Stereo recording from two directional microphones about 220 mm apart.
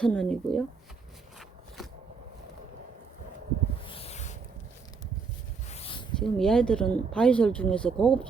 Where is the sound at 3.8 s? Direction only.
25° left (ahead or behind).